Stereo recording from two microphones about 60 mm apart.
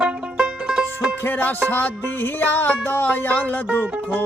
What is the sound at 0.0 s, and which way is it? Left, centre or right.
Music, centre.